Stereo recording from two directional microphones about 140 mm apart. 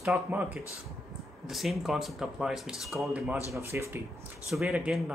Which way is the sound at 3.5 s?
20° right (ahead or behind).